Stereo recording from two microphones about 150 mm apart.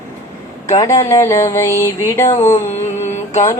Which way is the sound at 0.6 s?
20° left (ahead or behind).